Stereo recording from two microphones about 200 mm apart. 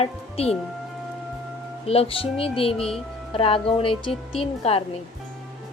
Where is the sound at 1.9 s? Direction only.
30° left (ahead or behind).